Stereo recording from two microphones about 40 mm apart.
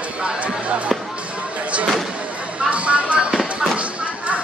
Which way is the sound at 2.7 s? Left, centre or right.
Right.